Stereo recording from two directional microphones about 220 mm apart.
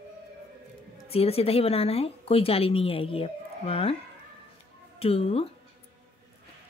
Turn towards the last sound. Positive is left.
turn(degrees=25)  # may be behind; listen again after turning